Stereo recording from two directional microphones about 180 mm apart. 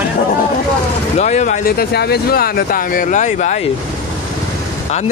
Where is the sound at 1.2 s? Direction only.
40° left (ahead or behind).